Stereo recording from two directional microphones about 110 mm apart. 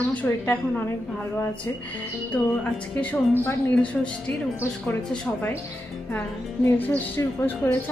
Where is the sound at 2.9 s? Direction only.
15° left (ahead or behind).